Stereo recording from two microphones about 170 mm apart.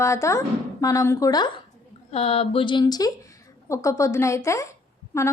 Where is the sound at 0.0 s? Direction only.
15° left (ahead or behind).